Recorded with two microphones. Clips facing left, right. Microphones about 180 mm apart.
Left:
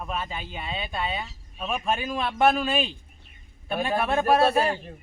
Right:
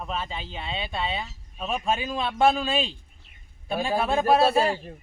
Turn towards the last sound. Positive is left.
turn(degrees=-30)  # may be behind; listen again after turning